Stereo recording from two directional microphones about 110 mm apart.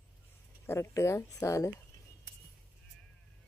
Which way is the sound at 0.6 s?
25° left (ahead or behind).